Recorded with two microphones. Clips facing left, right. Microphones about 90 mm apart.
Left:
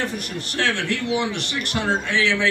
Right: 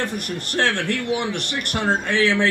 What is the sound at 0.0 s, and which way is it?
A man's voice, 55° right (ahead or behind).